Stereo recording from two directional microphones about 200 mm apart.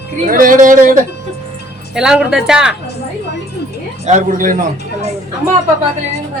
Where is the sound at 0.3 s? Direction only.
45° right (ahead or behind).